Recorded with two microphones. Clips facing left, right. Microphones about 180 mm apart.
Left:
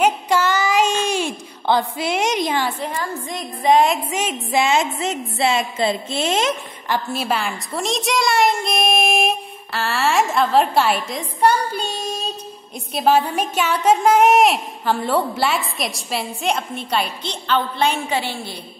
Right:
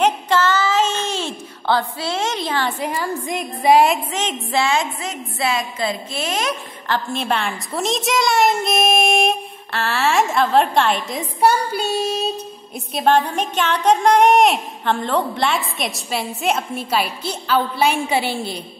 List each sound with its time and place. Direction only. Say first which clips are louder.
0.0 s a sound: even; 10° left (ahead or behind)
2.8 s a woman's voice: right 2 dB; 10° right (ahead or behind)
4.1 s a woman's voice: left 1 dB; 10° left (ahead or behind)
6.9 s speech: even; 5° left (ahead or behind)
11.1 s a woman's voice: right 2 dB; 10° right (ahead or behind)